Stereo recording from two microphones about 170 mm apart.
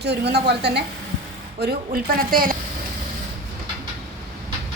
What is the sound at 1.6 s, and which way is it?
Speech, 65° right (ahead or behind).